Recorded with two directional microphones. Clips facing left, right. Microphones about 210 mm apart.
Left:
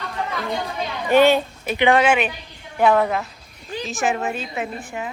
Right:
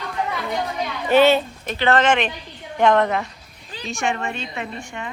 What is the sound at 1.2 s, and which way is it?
Speech, 10° left (ahead or behind).